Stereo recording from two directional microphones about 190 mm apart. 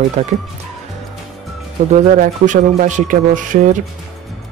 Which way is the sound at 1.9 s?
40° right (ahead or behind).